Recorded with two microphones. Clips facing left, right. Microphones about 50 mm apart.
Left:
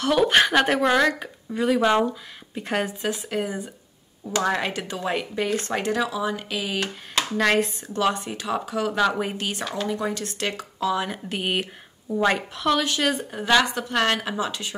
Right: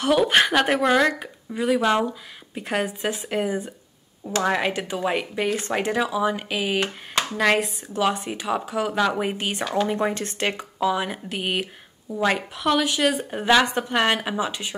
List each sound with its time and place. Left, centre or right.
0.1 s speech: centre
3.0 s speech: right
3.3 s speech: centre
9.3 s speech: centre
9.8 s speech: right; by 11.1 s centre
11.2 s a woman's voice: centre
12.4 s speech: centre
13.2 s speech: centre